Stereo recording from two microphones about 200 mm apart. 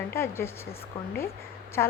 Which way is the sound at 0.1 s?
10° left (ahead or behind).